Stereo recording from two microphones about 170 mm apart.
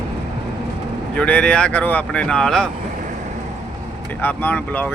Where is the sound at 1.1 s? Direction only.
5° left (ahead or behind).